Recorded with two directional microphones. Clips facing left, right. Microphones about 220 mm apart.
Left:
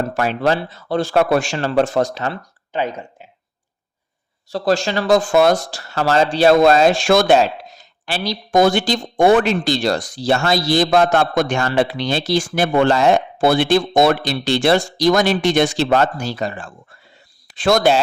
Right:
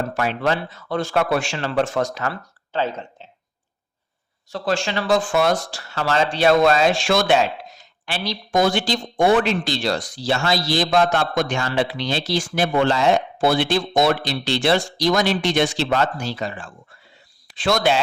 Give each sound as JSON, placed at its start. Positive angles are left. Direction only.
{"t": 0.1, "sound": "speech", "side_deg": 40}
{"t": 4.4, "sound": "speech", "side_deg": 35}
{"t": 8.5, "sound": "speech", "side_deg": 50}